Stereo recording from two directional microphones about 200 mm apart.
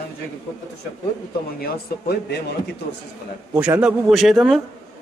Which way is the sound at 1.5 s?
50° left (ahead or behind).